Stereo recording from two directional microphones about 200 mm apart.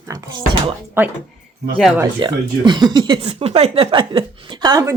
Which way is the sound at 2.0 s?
20° right (ahead or behind).